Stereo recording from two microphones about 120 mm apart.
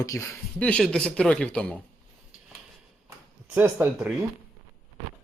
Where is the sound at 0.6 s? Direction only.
10° left (ahead or behind).